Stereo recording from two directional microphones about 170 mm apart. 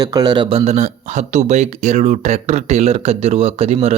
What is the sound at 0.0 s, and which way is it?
Speech, 20° right (ahead or behind).